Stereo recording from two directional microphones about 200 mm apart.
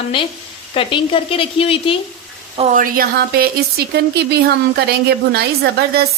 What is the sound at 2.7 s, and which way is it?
A woman's voice, 45° right (ahead or behind).